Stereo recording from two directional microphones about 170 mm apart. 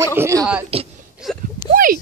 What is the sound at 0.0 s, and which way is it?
Speech, 15° right (ahead or behind).